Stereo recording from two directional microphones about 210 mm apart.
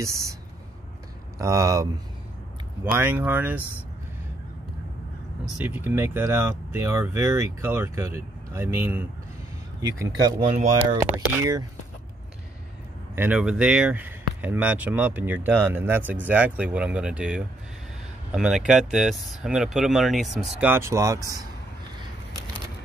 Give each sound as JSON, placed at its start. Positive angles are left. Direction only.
{"t": 0.0, "sound": "speech", "side_deg": -15}
{"t": 1.4, "sound": "speech", "side_deg": -15}
{"t": 5.7, "sound": "speech", "side_deg": -10}
{"t": 13.1, "sound": "speech", "side_deg": -10}